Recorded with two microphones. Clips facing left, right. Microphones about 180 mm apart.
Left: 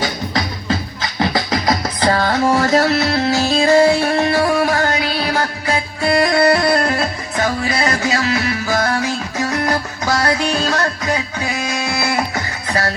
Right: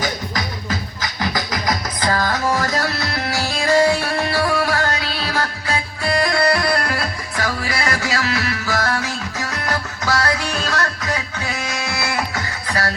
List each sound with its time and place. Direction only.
0.3 s music: 25° left (ahead or behind)